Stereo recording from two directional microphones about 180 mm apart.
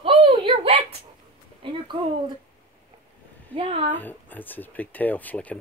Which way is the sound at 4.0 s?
10° left (ahead or behind).